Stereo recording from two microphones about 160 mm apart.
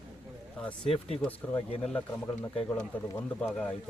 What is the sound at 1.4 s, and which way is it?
Speech, 10° left (ahead or behind).